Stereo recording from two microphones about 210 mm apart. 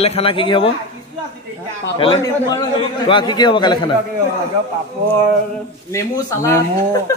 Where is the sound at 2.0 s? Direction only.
25° left (ahead or behind).